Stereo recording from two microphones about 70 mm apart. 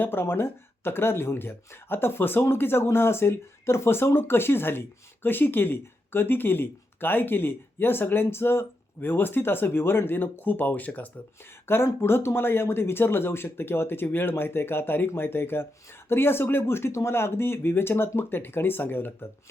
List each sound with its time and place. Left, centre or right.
0.0 s speech: left
11.6 s speech: left